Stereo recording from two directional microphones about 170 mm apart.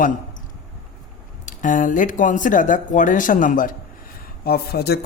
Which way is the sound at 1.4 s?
50° left (ahead or behind).